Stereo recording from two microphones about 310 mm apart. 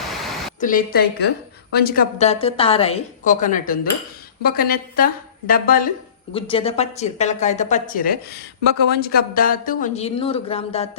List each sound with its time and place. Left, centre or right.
0.1 s pink noise: centre
0.6 s speech: left